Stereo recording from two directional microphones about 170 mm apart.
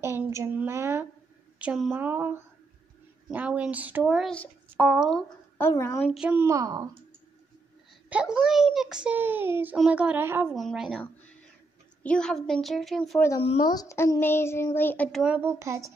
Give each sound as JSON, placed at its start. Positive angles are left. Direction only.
{"t": 0.0, "sound": "a child's voice", "side_deg": -15}
{"t": 5.6, "sound": "a child's voice", "side_deg": 15}
{"t": 6.1, "sound": "a child's voice", "side_deg": -5}
{"t": 6.4, "sound": "speech", "side_deg": -20}
{"t": 8.1, "sound": "a child's voice", "side_deg": -5}
{"t": 10.5, "sound": "a woman's voice", "side_deg": 0}
{"t": 13.4, "sound": "speech", "side_deg": 35}
{"t": 13.7, "sound": "a child's voice", "side_deg": 20}
{"t": 15.3, "sound": "a child's voice", "side_deg": -15}